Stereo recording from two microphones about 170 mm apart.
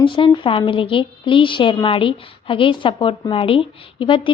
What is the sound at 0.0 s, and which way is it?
A woman's voice, 30° left (ahead or behind).